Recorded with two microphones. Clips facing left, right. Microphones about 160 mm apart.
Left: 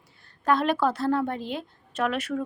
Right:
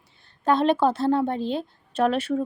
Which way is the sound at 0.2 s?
25° right (ahead or behind).